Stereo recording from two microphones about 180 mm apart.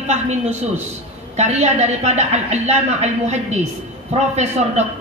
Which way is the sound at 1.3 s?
40° right (ahead or behind).